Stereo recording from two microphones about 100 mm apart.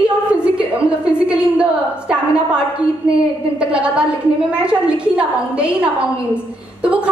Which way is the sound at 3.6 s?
10° right (ahead or behind).